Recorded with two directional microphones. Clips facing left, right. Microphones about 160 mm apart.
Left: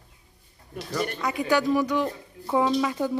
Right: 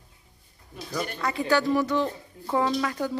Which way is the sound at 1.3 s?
15° left (ahead or behind).